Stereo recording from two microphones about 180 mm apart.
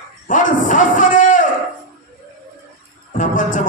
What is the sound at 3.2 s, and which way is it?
Music, 45° left (ahead or behind).